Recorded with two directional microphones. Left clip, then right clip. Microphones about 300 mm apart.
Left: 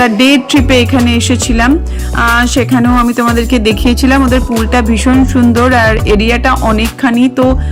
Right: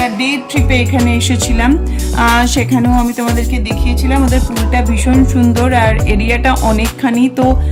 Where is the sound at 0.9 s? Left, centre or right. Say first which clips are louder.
Left 3 dB; centre.